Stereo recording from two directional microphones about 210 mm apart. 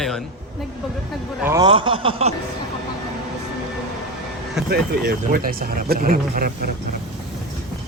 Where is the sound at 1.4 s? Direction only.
20° right (ahead or behind).